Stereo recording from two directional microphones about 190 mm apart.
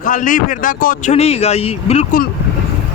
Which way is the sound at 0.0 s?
45° left (ahead or behind).